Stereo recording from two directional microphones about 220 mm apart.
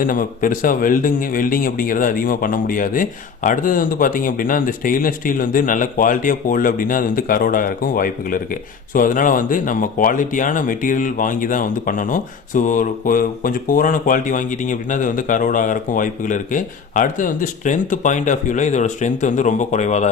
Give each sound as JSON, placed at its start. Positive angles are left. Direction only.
{"t": 0.0, "sound": "speech", "side_deg": 40}